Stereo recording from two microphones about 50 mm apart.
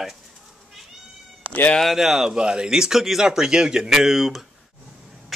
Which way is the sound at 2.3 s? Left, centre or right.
Centre.